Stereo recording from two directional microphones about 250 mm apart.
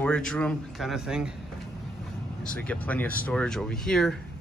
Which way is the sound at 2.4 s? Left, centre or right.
Centre.